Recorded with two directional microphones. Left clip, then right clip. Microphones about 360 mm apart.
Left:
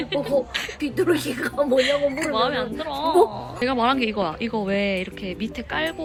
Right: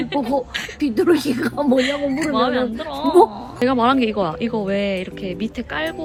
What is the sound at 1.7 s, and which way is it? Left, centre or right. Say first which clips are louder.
Speech: even; centre.